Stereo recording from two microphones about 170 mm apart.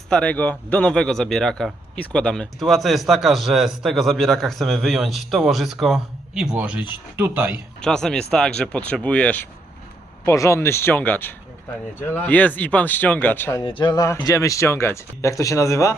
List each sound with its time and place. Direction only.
0.1 s speech: 5° left (ahead or behind); by 7.6 s 15° right (ahead or behind)
7.8 s speech: 5° left (ahead or behind)
13.7 s speech: 30° left (ahead or behind)